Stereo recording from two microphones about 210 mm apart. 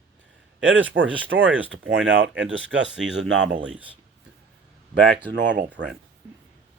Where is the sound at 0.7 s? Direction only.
60° right (ahead or behind).